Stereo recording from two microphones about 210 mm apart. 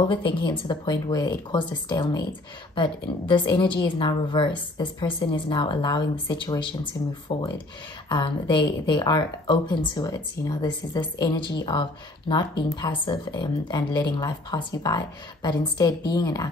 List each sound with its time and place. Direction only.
0.1 s a woman's voice: 25° left (ahead or behind)